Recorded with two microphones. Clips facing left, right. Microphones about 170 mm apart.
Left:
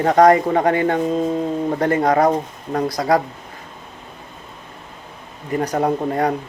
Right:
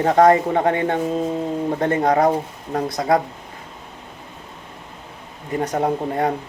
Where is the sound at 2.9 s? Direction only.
20° right (ahead or behind).